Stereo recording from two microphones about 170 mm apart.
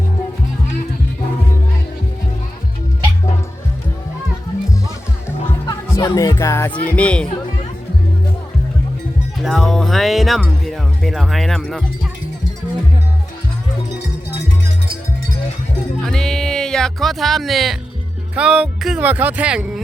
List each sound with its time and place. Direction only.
5.6 s speech: 20° left (ahead or behind)
9.4 s speech: centre (ahead or behind)
16.0 s music: 5° left (ahead or behind)
18.3 s speech: 5° right (ahead or behind)